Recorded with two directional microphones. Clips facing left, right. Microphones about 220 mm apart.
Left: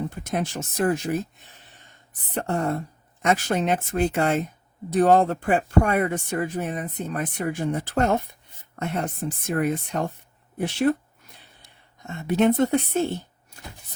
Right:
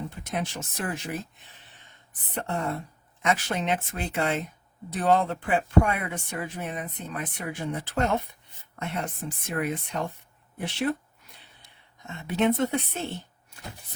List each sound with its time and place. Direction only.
0.1 s speech: 45° left (ahead or behind)
2.3 s a woman's voice: 45° left (ahead or behind)